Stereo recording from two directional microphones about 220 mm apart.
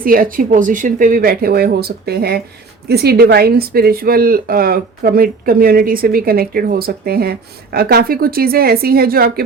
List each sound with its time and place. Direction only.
0.0 s speech: 40° right (ahead or behind)